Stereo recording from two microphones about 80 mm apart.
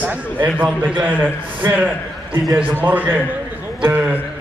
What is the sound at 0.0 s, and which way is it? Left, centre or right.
A man's voice, centre.